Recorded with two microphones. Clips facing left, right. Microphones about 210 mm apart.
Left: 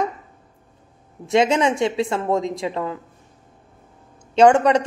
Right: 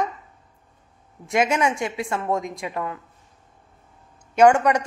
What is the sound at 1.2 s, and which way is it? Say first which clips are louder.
Speech: left 4 dB; 25° left (ahead or behind).